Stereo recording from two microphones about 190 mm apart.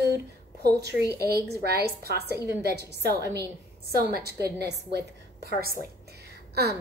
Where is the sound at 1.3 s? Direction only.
55° right (ahead or behind).